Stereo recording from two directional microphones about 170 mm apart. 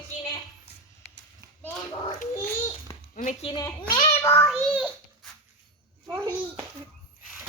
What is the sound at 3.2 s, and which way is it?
Speech, 50° left (ahead or behind).